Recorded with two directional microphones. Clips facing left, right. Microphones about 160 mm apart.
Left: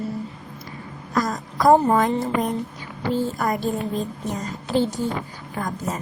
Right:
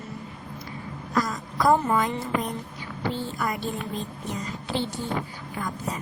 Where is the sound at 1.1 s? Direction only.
45° left (ahead or behind).